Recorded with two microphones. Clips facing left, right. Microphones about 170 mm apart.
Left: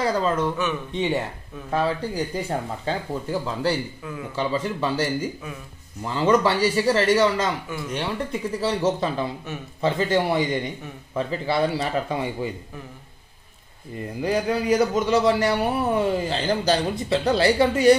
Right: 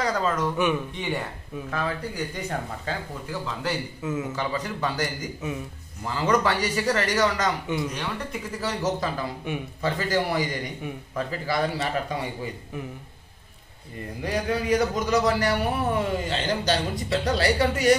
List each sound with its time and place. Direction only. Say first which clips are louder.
0.0 s a man's voice: left 3 dB; 30° left (ahead or behind)
4.0 s a man's voice: right 5 dB; 20° right (ahead or behind)
4.4 s a man's voice: left 4 dB; 30° left (ahead or behind)
7.6 s a man's voice: right 4 dB; 20° right (ahead or behind)
8.0 s a man's voice: left 5 dB; 30° left (ahead or behind)
14.2 s a man's voice: left 4 dB; 35° left (ahead or behind)